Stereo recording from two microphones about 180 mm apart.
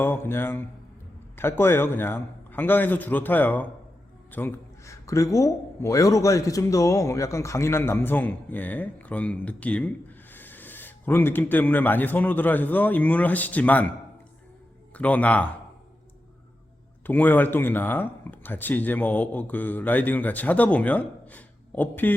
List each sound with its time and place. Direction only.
0.0 s a man's voice: 10° left (ahead or behind)
14.9 s a man's voice: 10° left (ahead or behind)
17.1 s a man's voice: 10° left (ahead or behind)